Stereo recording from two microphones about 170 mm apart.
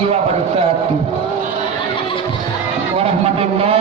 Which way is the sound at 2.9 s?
35° right (ahead or behind).